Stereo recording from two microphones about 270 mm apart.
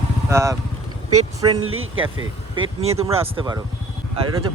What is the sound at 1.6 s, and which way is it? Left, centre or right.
Speech, right.